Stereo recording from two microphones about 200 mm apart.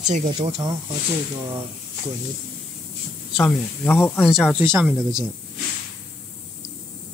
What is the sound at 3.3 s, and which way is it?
Speech, 10° left (ahead or behind).